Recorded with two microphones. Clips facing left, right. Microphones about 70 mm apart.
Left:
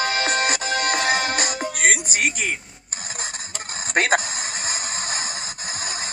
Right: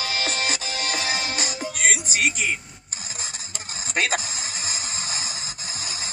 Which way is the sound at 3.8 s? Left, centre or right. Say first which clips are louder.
Left 5 dB; left.